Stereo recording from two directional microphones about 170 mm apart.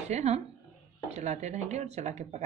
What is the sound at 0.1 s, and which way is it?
A woman's voice, 40° right (ahead or behind).